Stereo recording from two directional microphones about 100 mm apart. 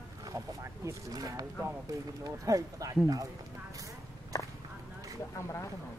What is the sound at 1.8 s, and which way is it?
Speech, 35° right (ahead or behind).